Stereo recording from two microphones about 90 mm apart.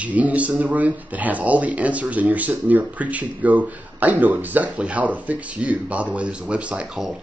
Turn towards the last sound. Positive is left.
turn(degrees=-10)  # may be behind; listen again after turning